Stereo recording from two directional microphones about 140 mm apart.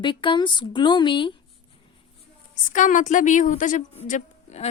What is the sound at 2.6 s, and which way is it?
A woman's voice, 70° left (ahead or behind).